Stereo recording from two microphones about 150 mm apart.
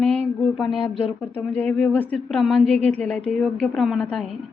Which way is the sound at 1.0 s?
40° left (ahead or behind).